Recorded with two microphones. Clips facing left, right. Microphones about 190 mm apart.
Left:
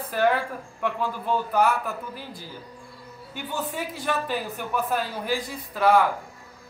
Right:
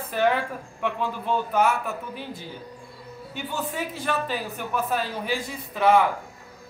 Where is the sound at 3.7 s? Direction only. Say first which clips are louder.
Even; centre (ahead or behind).